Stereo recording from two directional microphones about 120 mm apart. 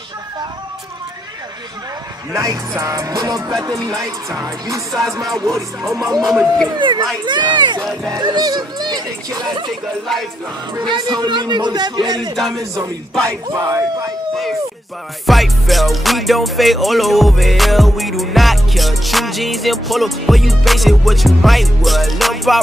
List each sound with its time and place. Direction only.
2.3 s speech: 30° right (ahead or behind)
6.0 s music: centre (ahead or behind)
6.8 s a man's voice: 40° right (ahead or behind)
10.8 s a man's voice: 40° right (ahead or behind)
15.2 s music: centre (ahead or behind)